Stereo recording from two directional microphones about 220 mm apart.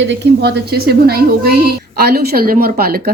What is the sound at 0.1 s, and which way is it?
A woman's voice, 50° right (ahead or behind).